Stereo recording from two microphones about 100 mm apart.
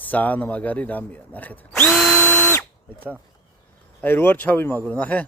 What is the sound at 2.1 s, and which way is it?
Drill, 20° left (ahead or behind).